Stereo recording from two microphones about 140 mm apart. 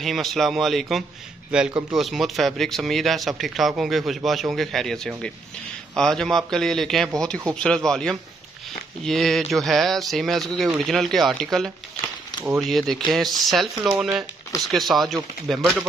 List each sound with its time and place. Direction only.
0.0 s speech: centre (ahead or behind)
1.7 s speech: 30° right (ahead or behind)
2.0 s speech: centre (ahead or behind)